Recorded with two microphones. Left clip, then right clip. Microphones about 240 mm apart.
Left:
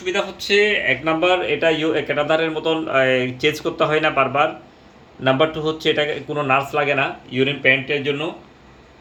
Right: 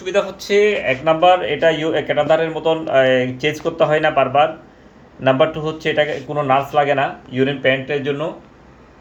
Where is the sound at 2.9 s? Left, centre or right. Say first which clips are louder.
Right 3 dB; right.